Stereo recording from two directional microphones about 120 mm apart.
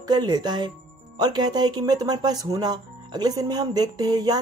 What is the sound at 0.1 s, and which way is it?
Speech, 35° right (ahead or behind).